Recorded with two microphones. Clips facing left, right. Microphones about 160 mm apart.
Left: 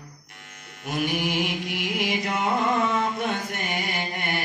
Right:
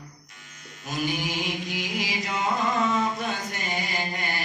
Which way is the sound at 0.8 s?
60° left (ahead or behind).